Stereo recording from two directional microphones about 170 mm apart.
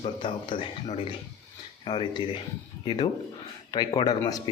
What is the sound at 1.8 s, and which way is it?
Speech, 30° left (ahead or behind).